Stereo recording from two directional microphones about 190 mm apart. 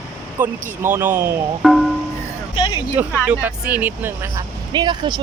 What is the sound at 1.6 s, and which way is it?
Speech, centre (ahead or behind).